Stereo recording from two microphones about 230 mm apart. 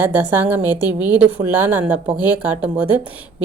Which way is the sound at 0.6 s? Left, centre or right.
Centre.